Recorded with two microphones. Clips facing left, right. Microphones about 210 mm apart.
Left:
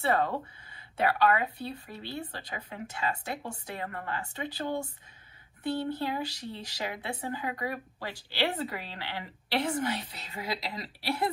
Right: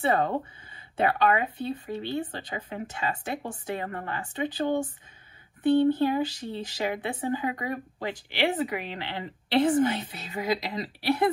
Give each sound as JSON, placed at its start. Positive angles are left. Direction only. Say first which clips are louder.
{"t": 0.0, "sound": "speech", "louder": "right 3 dB", "side_deg": -20}